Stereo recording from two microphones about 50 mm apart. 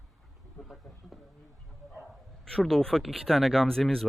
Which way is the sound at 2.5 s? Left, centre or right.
Centre.